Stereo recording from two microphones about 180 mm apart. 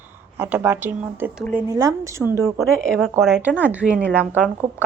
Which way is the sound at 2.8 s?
5° left (ahead or behind).